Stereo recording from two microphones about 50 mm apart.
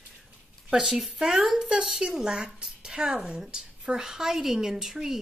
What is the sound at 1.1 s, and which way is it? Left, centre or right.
Speech, centre.